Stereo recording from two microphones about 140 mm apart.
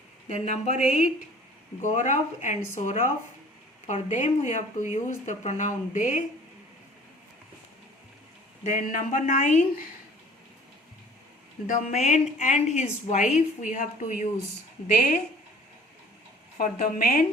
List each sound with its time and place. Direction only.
0.3 s a woman's voice: 55° left (ahead or behind)
8.7 s a woman's voice: 60° left (ahead or behind)
11.7 s a woman's voice: 55° left (ahead or behind)
16.6 s a woman's voice: 80° left